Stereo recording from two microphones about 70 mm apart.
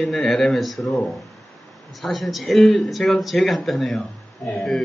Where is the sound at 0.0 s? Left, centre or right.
Centre.